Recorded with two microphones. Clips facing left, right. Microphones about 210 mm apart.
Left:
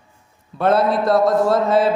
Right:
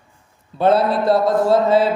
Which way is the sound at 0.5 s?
30° right (ahead or behind).